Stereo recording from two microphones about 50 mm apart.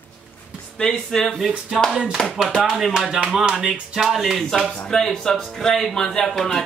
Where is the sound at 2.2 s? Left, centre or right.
Centre.